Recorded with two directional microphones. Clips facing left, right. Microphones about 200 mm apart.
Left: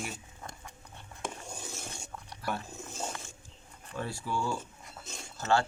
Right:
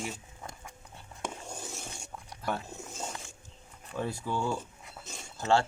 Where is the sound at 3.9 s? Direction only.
20° right (ahead or behind).